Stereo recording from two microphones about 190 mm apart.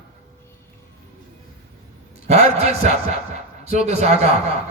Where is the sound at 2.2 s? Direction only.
35° right (ahead or behind).